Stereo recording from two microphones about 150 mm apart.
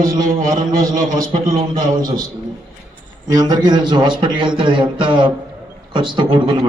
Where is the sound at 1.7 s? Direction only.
30° right (ahead or behind).